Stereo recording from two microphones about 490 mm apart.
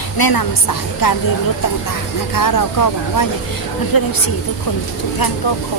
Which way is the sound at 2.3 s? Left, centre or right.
Left.